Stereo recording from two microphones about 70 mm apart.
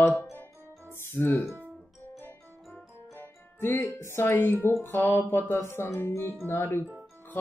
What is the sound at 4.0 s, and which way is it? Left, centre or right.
Speech, left.